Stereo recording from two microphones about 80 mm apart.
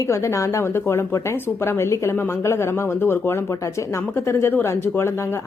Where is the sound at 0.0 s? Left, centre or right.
Left.